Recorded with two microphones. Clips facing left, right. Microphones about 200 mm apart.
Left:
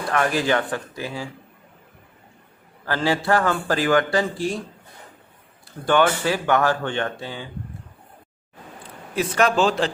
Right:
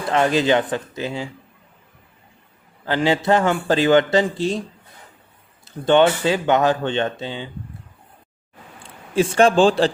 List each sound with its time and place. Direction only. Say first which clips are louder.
0.1 s a man's voice: right 4 dB; 20° right (ahead or behind)
2.8 s a man's voice: right 3 dB; 20° right (ahead or behind)
5.6 s a man's voice: right 4 dB; 25° right (ahead or behind)
9.1 s a man's voice: right 5 dB; 30° right (ahead or behind)